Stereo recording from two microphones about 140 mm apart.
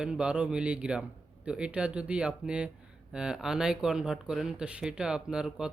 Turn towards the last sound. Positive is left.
turn(degrees=-5)  # may be behind; listen again after turning